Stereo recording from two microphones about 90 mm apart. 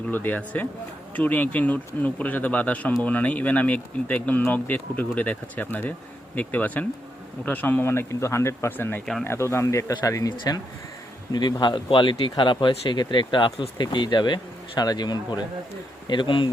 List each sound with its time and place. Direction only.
0.1 s speech: 20° left (ahead or behind); by 10.3 s 35° left (ahead or behind)
11.3 s speech: 50° left (ahead or behind)
16.0 s speech: 65° left (ahead or behind)